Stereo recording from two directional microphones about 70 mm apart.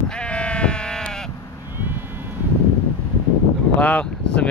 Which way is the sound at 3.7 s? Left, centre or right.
Centre.